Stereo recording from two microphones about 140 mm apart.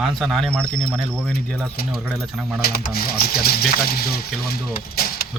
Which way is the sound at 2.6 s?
90° left.